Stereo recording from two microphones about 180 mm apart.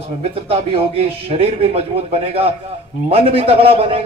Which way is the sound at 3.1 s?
35° right (ahead or behind).